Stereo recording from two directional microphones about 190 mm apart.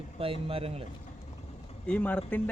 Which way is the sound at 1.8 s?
5° left (ahead or behind).